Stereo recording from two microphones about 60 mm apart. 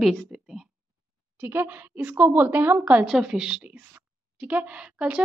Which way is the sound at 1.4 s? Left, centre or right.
Right.